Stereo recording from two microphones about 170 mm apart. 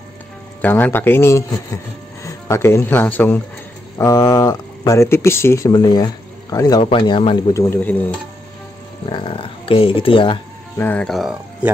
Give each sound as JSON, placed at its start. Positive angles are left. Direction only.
{"t": 0.6, "sound": "speech", "side_deg": 10}
{"t": 4.0, "sound": "speech", "side_deg": 20}
{"t": 7.5, "sound": "speech", "side_deg": 10}
{"t": 9.1, "sound": "speech", "side_deg": 30}
{"t": 10.8, "sound": "speech", "side_deg": 10}